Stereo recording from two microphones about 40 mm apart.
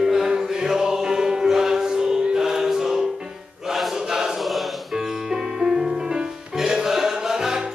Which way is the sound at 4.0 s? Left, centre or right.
Centre.